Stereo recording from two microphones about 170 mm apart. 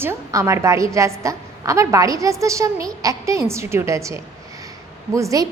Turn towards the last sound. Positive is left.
turn(degrees=-20)  # may be behind; listen again after turning